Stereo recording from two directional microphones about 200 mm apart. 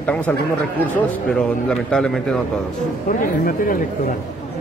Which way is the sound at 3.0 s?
45° left (ahead or behind).